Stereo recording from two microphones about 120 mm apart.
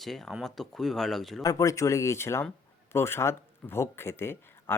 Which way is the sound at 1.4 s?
30° left (ahead or behind).